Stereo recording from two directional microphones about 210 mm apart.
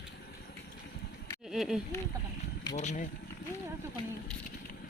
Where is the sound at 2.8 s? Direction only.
35° left (ahead or behind).